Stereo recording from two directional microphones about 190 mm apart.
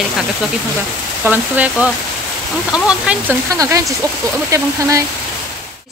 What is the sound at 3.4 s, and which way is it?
Speech, 15° right (ahead or behind).